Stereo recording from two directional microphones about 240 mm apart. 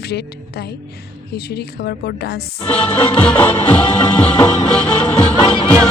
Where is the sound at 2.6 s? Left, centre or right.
Centre.